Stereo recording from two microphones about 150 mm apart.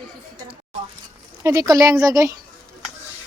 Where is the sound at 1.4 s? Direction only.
20° right (ahead or behind).